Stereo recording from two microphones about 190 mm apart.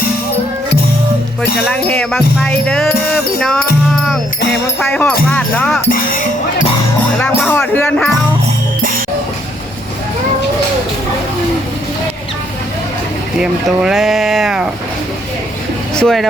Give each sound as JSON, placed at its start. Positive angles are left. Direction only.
{"t": 1.4, "sound": "music", "side_deg": 5}
{"t": 4.8, "sound": "music", "side_deg": 5}
{"t": 5.9, "sound": "speech", "side_deg": 45}
{"t": 7.2, "sound": "speech", "side_deg": 5}
{"t": 13.4, "sound": "music", "side_deg": 0}
{"t": 16.0, "sound": "speech", "side_deg": 0}